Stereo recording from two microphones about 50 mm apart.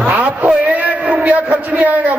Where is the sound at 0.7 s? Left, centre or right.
Right.